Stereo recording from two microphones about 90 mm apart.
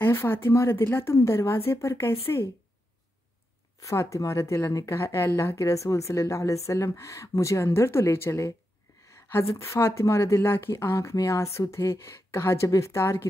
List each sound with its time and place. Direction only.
0.0 s speech: 25° left (ahead or behind)
3.8 s speech: 35° left (ahead or behind)